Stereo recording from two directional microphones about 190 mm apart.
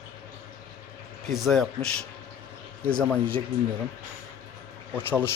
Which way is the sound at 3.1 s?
10° left (ahead or behind).